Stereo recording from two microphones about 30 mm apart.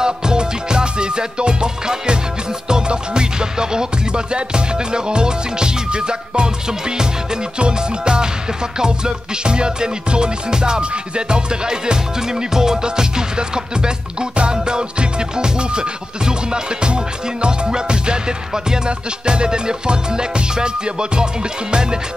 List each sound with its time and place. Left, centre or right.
0.0 s music: right
7.5 s music: right